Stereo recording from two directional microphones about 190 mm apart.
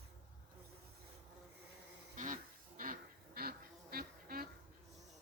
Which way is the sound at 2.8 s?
50° right (ahead or behind).